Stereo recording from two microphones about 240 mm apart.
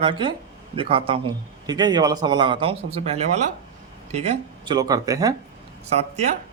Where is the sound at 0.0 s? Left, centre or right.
Right.